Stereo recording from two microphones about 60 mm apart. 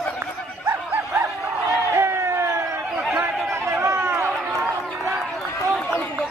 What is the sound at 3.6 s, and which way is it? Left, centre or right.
Run, right.